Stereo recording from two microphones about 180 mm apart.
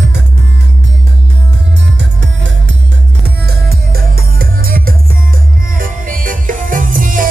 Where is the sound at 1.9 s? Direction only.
90° right.